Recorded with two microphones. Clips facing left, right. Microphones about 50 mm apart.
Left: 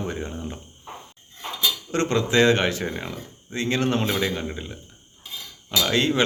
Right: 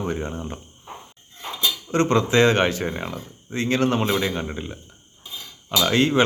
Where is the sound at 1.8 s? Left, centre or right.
Right.